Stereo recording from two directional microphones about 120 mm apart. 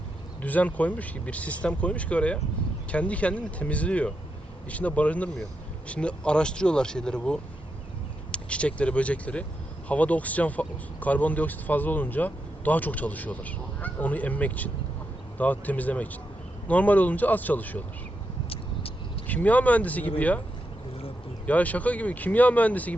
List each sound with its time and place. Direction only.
0.4 s speech: 15° left (ahead or behind)
18.4 s vehicle: 50° left (ahead or behind)
19.3 s speech: 15° left (ahead or behind)
21.4 s speech: 10° left (ahead or behind)